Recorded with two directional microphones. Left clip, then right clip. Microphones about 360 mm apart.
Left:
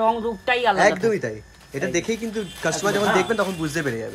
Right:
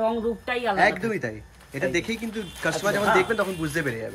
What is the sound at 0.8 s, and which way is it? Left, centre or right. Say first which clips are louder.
Speech: left 4 dB; centre.